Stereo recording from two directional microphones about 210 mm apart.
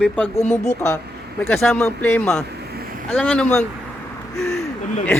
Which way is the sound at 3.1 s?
5° left (ahead or behind).